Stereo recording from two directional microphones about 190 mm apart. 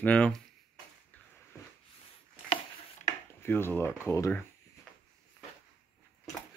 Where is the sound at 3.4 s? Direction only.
10° left (ahead or behind).